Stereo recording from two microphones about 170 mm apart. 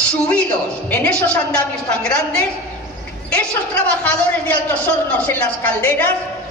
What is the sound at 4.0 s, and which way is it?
A woman's voice, 10° left (ahead or behind).